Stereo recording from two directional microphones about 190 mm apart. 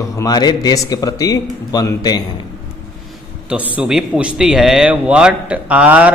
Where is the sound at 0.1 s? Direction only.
20° left (ahead or behind).